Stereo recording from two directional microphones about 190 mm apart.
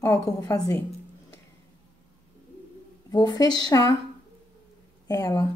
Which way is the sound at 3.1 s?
20° left (ahead or behind).